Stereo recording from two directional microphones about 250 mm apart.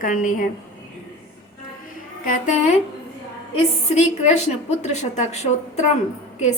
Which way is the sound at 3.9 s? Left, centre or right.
Left.